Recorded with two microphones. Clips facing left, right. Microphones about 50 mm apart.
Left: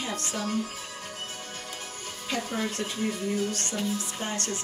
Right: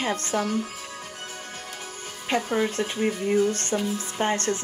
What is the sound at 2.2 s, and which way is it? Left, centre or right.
Speech, right.